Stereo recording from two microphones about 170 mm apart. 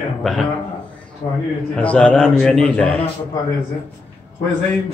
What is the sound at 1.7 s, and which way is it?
A man's voice, 5° left (ahead or behind).